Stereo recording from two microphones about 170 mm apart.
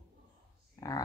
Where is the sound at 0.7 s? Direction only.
20° left (ahead or behind).